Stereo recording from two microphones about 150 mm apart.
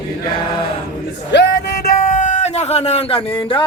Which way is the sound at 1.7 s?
90° left.